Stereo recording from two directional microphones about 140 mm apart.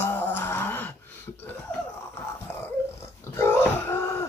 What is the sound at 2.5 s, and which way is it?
Dog, 15° left (ahead or behind).